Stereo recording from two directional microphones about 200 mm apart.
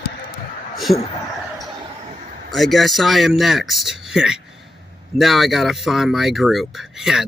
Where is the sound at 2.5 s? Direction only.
Centre (ahead or behind).